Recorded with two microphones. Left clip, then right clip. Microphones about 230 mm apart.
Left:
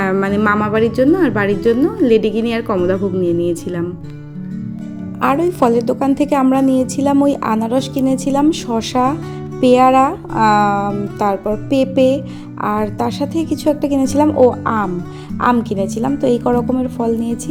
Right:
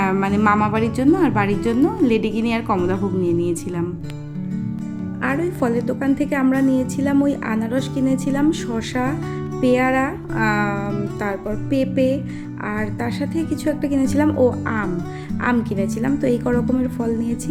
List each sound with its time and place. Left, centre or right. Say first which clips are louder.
0.0 s a woman's voice: left 3 dB; centre
5.2 s a woman's voice: left 8 dB; centre